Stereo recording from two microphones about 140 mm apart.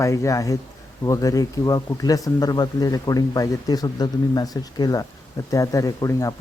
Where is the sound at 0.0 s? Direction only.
20° left (ahead or behind).